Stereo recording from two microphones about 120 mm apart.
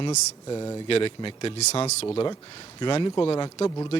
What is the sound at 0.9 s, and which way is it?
A man's voice, 50° left (ahead or behind).